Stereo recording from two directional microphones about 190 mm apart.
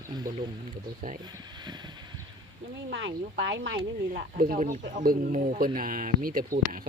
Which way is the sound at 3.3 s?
65° right (ahead or behind).